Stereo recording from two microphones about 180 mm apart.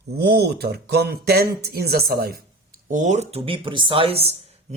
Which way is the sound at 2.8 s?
45° right (ahead or behind).